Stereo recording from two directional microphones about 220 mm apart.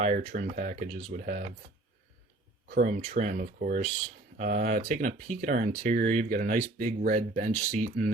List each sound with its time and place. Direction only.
0.0 s speech: 30° right (ahead or behind)
2.8 s speech: 30° right (ahead or behind)